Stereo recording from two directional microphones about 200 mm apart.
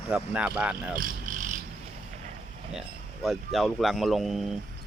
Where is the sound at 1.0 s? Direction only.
40° right (ahead or behind).